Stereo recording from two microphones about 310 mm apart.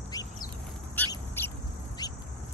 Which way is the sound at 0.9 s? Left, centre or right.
Centre.